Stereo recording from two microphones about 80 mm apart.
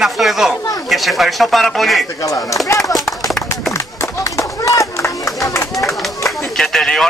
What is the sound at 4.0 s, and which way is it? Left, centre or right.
Run, left.